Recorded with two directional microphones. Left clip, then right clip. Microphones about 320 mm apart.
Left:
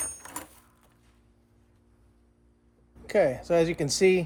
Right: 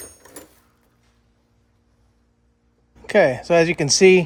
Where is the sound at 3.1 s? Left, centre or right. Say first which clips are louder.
Right 8 dB; right.